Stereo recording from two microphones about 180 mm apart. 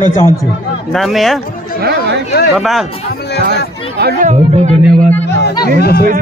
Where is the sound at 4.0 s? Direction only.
60° right (ahead or behind).